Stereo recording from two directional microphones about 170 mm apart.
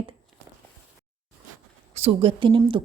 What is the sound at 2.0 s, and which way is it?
Speech, 35° right (ahead or behind).